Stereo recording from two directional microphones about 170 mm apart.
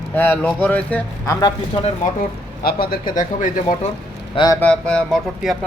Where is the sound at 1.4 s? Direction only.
25° left (ahead or behind).